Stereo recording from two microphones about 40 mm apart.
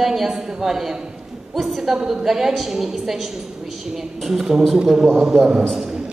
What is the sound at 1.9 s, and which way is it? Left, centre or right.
Speech, right.